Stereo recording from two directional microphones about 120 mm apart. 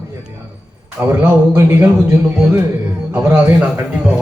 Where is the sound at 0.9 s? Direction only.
15° right (ahead or behind).